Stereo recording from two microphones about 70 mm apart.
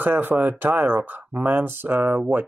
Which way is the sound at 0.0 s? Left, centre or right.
Right.